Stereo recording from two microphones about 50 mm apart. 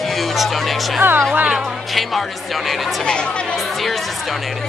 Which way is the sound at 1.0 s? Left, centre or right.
Right.